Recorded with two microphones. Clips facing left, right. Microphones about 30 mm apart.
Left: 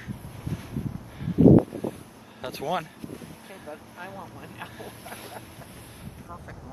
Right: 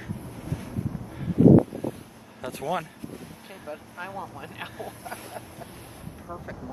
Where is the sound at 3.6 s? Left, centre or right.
Centre.